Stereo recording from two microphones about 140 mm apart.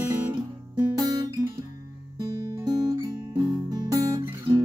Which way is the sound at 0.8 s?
30° right (ahead or behind).